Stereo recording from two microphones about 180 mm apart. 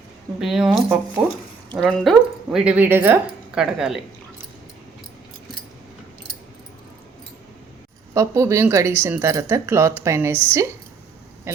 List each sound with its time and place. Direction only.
0.3 s speech: 5° right (ahead or behind)
8.1 s speech: 15° right (ahead or behind)
11.5 s speech: 15° right (ahead or behind)